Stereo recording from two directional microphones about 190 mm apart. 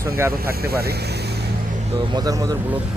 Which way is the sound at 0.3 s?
55° right (ahead or behind).